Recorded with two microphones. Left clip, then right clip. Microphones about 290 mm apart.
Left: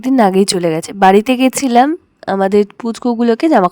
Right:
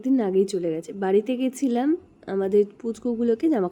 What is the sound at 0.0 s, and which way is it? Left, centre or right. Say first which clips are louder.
Speech: left 11 dB; left.